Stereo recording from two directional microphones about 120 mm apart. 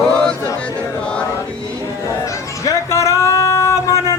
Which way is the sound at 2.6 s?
25° left (ahead or behind).